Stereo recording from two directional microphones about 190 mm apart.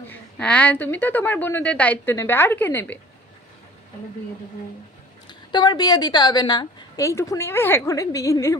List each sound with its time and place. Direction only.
0.1 s a woman's voice: 5° left (ahead or behind)
5.5 s a woman's voice: 20° left (ahead or behind)